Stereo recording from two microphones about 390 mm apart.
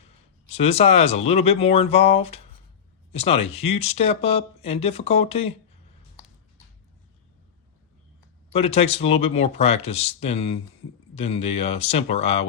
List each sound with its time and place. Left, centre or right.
0.5 s speech: centre
8.5 s speech: centre